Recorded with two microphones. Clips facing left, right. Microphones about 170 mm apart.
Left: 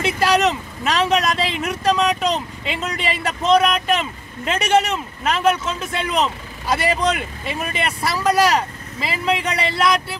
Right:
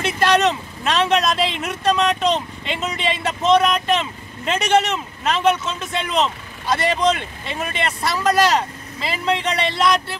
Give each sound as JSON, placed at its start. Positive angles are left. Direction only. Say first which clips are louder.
{"t": 0.2, "sound": "speech", "louder": "right 1 dB", "side_deg": 5}